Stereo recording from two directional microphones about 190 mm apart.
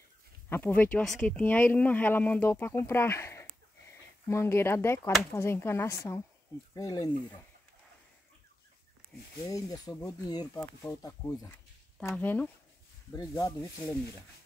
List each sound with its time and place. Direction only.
0.5 s speech: 10° left (ahead or behind)
9.5 s speech: 20° left (ahead or behind)